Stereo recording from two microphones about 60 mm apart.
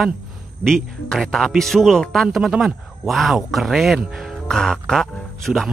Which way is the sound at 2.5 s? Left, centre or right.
Centre.